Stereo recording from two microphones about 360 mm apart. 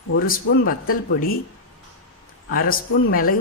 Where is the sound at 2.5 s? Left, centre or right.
Left.